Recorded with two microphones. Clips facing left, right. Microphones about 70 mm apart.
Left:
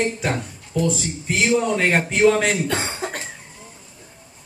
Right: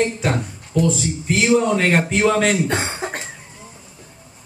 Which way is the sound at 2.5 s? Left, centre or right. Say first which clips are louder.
Right 3 dB; right.